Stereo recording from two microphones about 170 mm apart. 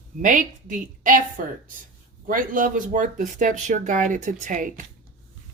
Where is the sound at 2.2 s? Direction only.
55° right (ahead or behind).